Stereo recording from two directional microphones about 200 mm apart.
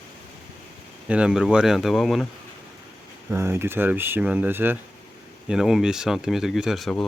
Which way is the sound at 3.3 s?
15° right (ahead or behind).